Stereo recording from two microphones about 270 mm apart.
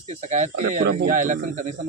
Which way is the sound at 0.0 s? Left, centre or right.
Right.